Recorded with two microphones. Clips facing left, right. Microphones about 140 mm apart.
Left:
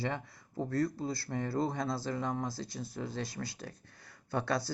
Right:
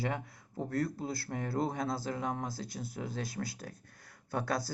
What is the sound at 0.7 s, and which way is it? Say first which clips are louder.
Speech: left 2 dB; 55° right (ahead or behind).